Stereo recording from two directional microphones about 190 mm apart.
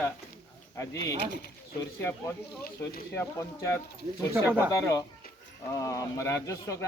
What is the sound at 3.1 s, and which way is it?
Speech, 15° left (ahead or behind).